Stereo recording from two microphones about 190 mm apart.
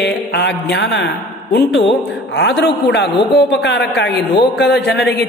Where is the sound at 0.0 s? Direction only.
60° left (ahead or behind).